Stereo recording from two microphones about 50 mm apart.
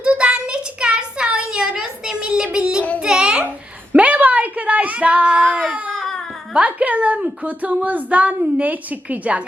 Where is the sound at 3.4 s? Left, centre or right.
Right.